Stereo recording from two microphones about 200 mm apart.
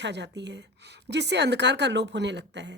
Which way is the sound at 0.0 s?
60° right (ahead or behind).